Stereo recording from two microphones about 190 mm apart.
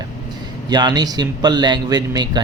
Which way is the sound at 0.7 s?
20° right (ahead or behind).